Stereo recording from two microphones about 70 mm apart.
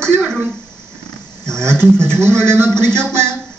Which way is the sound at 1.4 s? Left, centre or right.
Centre.